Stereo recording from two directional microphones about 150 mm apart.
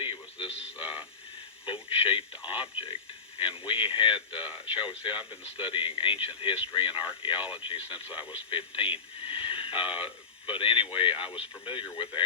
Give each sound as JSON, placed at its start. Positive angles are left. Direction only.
{"t": 0.0, "sound": "radio", "side_deg": 35}
{"t": 1.6, "sound": "speech", "side_deg": 35}